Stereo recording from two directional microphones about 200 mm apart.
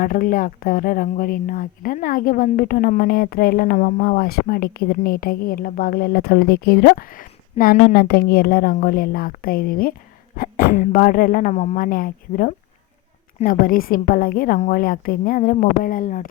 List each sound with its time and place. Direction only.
0.0 s speech: 45° left (ahead or behind)